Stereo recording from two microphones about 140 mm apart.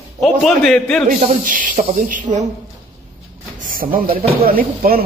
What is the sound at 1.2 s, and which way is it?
Speech, 75° right (ahead or behind).